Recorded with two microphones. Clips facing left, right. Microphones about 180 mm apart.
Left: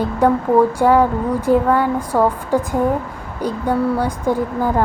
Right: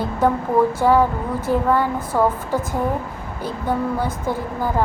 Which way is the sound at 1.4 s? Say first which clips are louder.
Left 3 dB; 15° left (ahead or behind).